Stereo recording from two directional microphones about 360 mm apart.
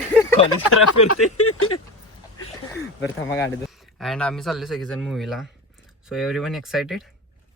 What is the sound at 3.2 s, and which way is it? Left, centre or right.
A man's voice, centre.